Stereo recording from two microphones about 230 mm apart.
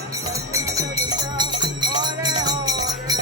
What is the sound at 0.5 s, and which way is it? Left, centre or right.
Music, centre.